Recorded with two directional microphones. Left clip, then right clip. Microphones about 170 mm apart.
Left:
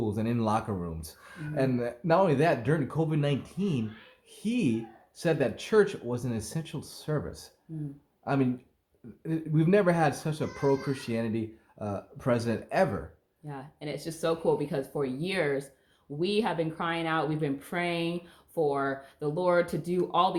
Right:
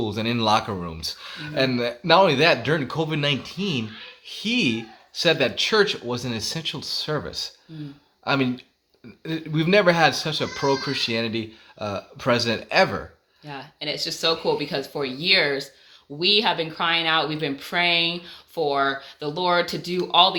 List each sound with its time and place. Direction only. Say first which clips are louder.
0.0 s speech: right 7 dB; 20° right (ahead or behind)
13.4 s speech: right 8 dB; 10° left (ahead or behind)